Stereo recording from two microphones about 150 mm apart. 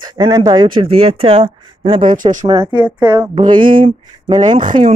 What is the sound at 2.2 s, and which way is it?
Speech, 60° right (ahead or behind).